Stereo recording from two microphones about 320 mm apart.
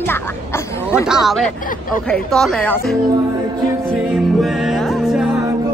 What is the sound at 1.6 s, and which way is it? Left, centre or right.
Speech, left.